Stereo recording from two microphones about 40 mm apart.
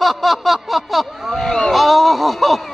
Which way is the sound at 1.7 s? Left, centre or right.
Centre.